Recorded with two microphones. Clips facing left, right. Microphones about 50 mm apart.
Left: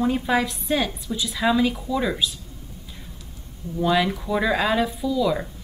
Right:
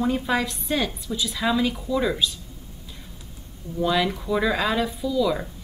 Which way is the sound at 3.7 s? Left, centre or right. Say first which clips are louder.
Left 2 dB; centre.